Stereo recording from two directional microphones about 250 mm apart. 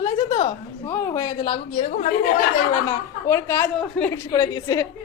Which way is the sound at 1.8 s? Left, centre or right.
Left.